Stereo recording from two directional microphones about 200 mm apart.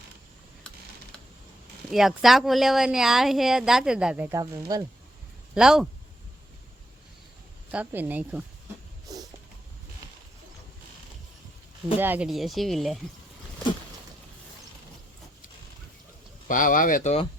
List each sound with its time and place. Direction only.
1.9 s speech: centre (ahead or behind)
5.5 s speech: 5° right (ahead or behind)
7.7 s speech: 10° right (ahead or behind)
9.1 s cat: 20° right (ahead or behind)
11.9 s speech: 10° right (ahead or behind)
16.5 s speech: 45° left (ahead or behind)